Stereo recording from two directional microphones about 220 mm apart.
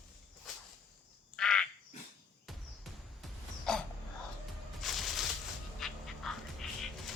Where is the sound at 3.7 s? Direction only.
Centre (ahead or behind).